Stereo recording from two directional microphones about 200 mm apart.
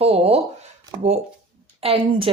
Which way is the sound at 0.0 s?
30° right (ahead or behind).